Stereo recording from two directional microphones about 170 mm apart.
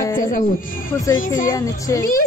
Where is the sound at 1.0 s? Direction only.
20° left (ahead or behind).